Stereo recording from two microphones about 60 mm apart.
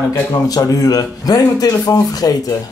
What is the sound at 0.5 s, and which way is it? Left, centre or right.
Speech, left.